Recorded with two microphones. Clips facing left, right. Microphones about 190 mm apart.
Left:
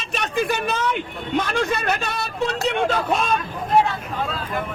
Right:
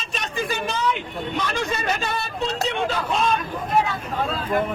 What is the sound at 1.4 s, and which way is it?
Speech, 55° left (ahead or behind).